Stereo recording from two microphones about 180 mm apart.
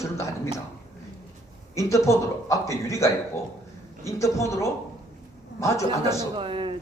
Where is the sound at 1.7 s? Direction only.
15° left (ahead or behind).